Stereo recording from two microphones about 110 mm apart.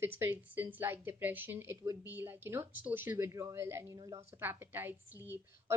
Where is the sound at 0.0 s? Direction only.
20° right (ahead or behind).